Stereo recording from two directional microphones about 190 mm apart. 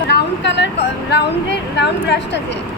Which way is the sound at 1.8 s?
65° left (ahead or behind).